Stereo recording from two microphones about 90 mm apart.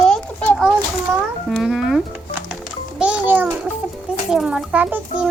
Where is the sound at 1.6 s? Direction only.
5° right (ahead or behind).